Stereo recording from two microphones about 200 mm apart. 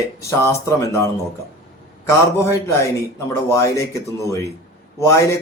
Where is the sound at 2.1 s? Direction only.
15° left (ahead or behind).